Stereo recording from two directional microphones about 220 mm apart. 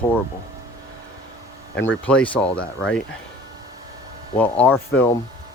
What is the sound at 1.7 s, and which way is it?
Speech, 60° left (ahead or behind).